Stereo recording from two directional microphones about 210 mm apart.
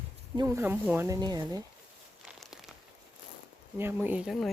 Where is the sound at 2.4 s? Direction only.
Centre (ahead or behind).